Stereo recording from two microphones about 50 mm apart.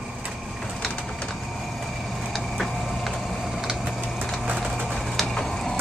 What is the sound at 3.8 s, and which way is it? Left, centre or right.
Vehicle, centre.